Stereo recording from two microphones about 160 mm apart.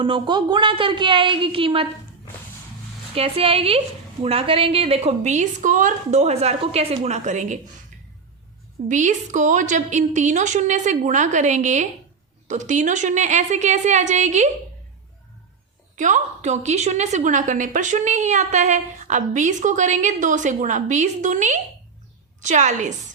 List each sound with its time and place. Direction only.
0.0 s a woman's voice: 30° right (ahead or behind)
3.2 s a woman's voice: 35° right (ahead or behind)
8.9 s a woman's voice: 50° right (ahead or behind)
16.0 s a woman's voice: 50° right (ahead or behind)